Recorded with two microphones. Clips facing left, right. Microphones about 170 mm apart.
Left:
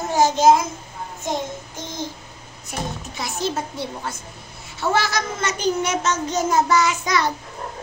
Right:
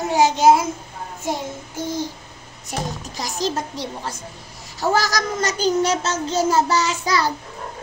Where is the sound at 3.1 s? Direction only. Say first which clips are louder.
Right 1 dB; 35° right (ahead or behind).